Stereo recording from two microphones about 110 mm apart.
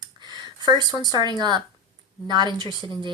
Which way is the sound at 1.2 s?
40° right (ahead or behind).